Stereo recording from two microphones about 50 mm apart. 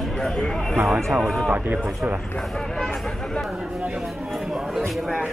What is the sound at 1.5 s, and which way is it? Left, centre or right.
Speech, right.